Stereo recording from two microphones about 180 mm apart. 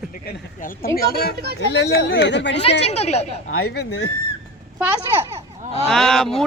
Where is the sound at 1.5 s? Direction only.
85° left.